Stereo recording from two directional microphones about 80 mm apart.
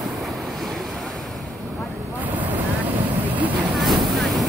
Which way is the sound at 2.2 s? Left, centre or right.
Right.